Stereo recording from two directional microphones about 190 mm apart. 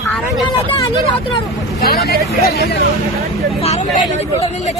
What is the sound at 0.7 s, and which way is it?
Speech, 25° left (ahead or behind).